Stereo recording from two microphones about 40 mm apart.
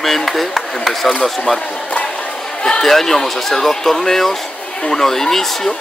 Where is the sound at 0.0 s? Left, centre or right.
Centre.